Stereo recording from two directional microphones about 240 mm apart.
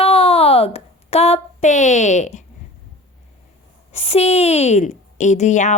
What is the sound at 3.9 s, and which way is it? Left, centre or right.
Speech, left.